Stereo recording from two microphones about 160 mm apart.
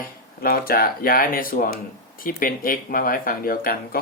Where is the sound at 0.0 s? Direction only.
65° left (ahead or behind).